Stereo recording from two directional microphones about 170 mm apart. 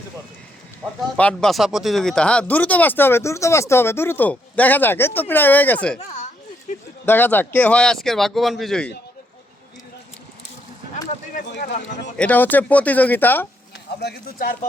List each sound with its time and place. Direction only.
1.1 s speech: 5° left (ahead or behind)
6.0 s speech: 45° left (ahead or behind)
7.0 s speech: 10° left (ahead or behind)
11.6 s speech: 45° left (ahead or behind)
12.1 s speech: 10° left (ahead or behind)
14.0 s speech: 65° left (ahead or behind)